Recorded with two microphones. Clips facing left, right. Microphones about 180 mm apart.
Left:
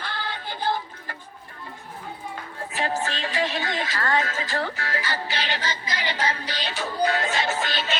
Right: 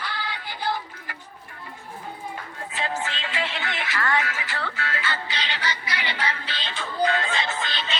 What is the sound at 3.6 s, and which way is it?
A woman's voice, 40° left (ahead or behind).